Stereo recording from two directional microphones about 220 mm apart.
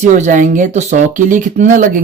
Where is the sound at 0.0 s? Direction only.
35° right (ahead or behind).